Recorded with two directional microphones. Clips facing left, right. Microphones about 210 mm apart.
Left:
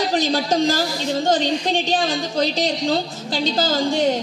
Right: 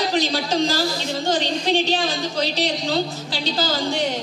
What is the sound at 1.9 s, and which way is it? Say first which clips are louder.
A woman's voice: left 2 dB; 50° left (ahead or behind).